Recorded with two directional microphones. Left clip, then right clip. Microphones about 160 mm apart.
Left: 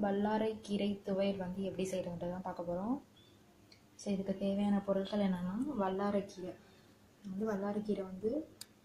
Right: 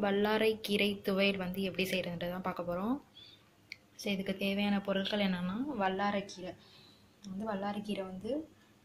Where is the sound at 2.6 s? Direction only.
25° right (ahead or behind).